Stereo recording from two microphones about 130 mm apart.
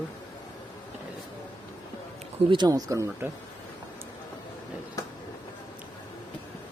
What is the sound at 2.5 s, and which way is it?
Speech, 35° right (ahead or behind).